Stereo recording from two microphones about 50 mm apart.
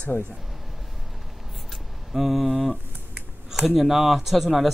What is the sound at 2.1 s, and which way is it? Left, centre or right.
Speech, centre.